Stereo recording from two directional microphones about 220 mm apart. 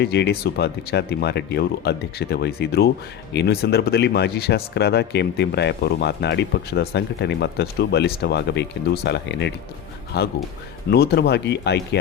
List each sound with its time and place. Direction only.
0.0 s speech: 50° left (ahead or behind)